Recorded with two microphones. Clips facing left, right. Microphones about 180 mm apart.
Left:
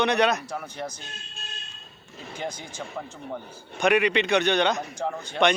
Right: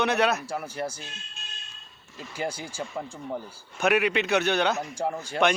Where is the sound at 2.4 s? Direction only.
10° right (ahead or behind).